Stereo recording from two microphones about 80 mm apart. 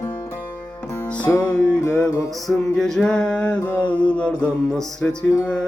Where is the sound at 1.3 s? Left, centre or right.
Left.